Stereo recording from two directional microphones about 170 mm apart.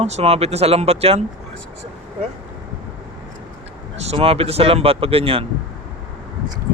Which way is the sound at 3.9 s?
35° right (ahead or behind).